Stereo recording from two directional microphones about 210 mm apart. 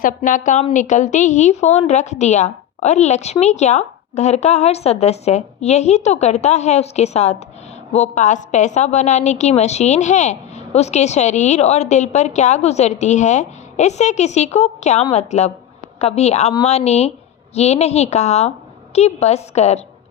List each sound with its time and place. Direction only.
0.0 s a woman's voice: 40° left (ahead or behind)